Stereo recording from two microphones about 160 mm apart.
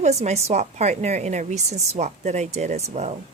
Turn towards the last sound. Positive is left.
turn(degrees=-45)  # may be behind; listen again after turning